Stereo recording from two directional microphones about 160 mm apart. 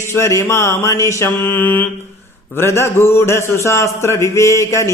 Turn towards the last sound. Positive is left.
turn(degrees=20)  # may be behind; listen again after turning